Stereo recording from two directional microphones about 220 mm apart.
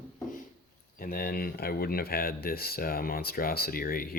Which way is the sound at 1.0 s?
40° left (ahead or behind).